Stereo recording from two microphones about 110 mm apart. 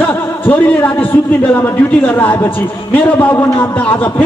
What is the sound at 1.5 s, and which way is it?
A man's voice, 15° left (ahead or behind).